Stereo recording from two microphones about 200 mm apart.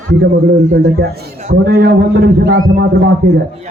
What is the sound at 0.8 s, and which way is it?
A man's voice, 55° right (ahead or behind).